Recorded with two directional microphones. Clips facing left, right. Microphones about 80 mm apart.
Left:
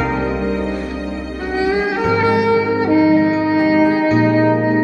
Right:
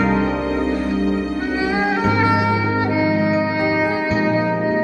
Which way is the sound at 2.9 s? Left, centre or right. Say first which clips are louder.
Left 7 dB; left.